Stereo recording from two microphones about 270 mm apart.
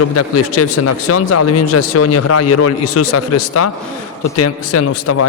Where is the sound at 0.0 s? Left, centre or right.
Left.